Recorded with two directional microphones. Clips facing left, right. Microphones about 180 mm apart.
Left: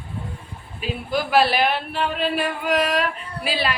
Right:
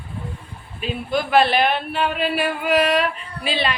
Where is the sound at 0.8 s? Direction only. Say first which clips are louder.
Right 1 dB; 5° left (ahead or behind).